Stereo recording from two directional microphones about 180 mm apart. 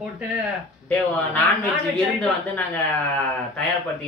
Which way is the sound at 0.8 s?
10° left (ahead or behind).